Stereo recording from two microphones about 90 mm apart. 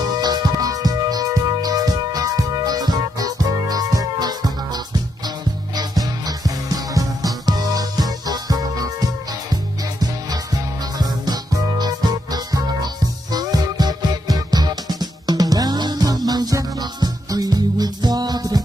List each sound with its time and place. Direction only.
0.2 s music: 50° right (ahead or behind)
11.0 s music: 45° right (ahead or behind)